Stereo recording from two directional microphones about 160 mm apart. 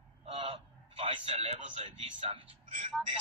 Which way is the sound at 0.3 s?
35° right (ahead or behind).